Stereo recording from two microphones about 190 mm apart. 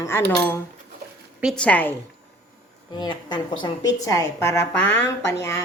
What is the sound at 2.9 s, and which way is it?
A woman's voice, 25° left (ahead or behind).